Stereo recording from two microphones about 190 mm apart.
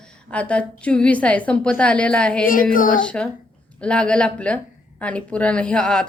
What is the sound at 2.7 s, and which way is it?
Speech, 45° left (ahead or behind).